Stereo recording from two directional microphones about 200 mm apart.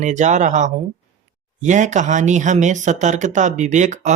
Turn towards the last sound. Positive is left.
turn(degrees=-35)  # may be behind; listen again after turning